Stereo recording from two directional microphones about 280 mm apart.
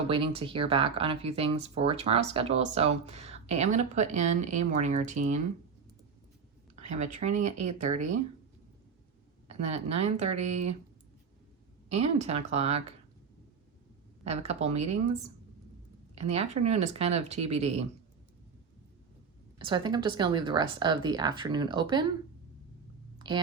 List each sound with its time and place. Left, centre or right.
0.1 s speech: centre
6.7 s speech: right
9.5 s speech: right
11.9 s speech: right
14.3 s speech: right
16.1 s speech: right
19.5 s speech: centre
23.1 s a sound: centre